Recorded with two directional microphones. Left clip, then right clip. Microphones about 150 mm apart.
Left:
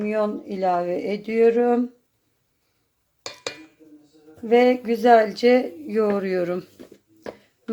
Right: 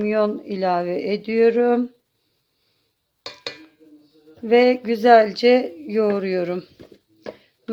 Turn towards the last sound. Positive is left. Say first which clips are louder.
# right 1 dB
turn(degrees=-10)  # may be behind; listen again after turning